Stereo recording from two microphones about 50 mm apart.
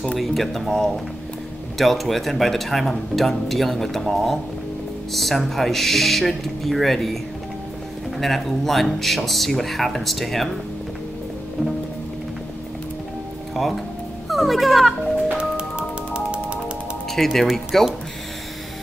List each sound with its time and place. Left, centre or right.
0.2 s speech: centre
8.2 s speech: centre
14.3 s a child's voice: centre
16.1 s music: right
17.1 s speech: centre